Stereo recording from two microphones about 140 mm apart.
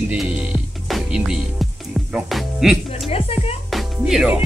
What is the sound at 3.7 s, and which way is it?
Music, centre (ahead or behind).